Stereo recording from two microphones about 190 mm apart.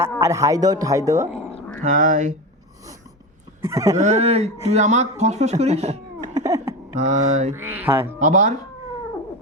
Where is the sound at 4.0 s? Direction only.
35° right (ahead or behind).